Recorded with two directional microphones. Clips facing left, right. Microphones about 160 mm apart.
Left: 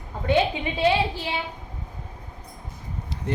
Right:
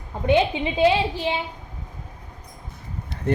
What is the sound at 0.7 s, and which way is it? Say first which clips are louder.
Speech: right 3 dB; 20° right (ahead or behind).